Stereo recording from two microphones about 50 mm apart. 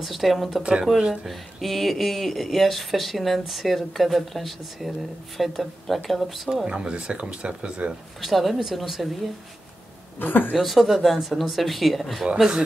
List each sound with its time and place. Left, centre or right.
0.0 s speech: centre
6.6 s speech: right
8.2 s speech: centre
10.1 s a woman's voice: left
10.5 s speech: centre
12.4 s speech: centre